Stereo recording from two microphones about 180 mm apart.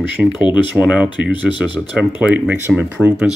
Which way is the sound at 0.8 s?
5° right (ahead or behind).